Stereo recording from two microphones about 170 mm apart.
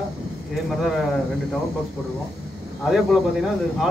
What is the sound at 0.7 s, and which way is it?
Speech, centre (ahead or behind).